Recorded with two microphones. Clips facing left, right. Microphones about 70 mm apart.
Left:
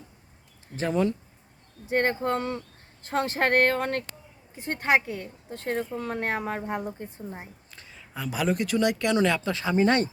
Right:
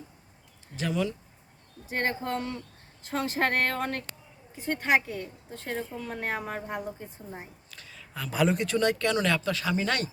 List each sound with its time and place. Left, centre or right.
0.8 s speech: left
7.7 s a sound: left
8.3 s speech: centre; by 10.1 s left